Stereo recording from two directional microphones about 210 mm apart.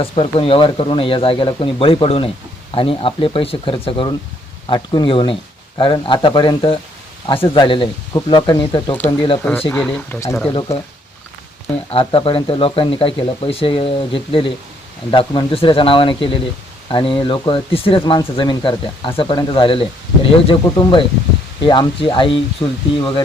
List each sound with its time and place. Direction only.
0.0 s speech: 25° left (ahead or behind)
9.4 s speech: 10° left (ahead or behind)
10.5 s speech: 25° left (ahead or behind)
11.9 s speech: 25° left (ahead or behind)
22.6 s speech: 15° left (ahead or behind)
23.0 s speech: 25° left (ahead or behind)